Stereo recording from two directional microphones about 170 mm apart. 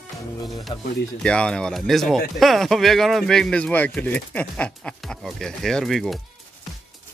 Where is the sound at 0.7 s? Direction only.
30° left (ahead or behind).